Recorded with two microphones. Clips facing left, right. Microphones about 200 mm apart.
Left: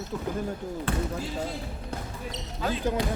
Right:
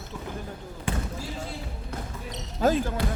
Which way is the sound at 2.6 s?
45° right (ahead or behind).